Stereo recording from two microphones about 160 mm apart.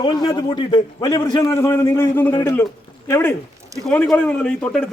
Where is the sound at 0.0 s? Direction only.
30° left (ahead or behind).